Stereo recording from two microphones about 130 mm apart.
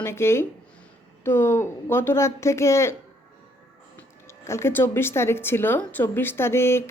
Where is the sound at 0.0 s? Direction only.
20° left (ahead or behind).